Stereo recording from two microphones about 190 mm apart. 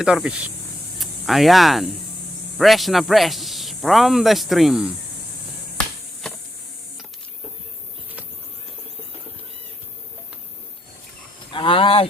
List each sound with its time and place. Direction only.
0.0 s speech: 5° right (ahead or behind)
11.5 s speech: 25° left (ahead or behind)